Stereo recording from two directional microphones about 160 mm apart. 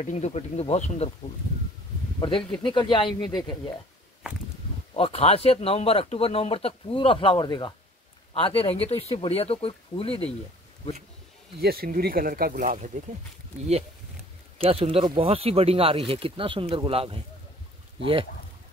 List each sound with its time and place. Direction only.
0.0 s speech: 45° left (ahead or behind)
2.1 s speech: 30° left (ahead or behind)
4.9 s speech: 35° left (ahead or behind)
11.6 s speech: 70° right (ahead or behind)
14.6 s speech: 35° right (ahead or behind)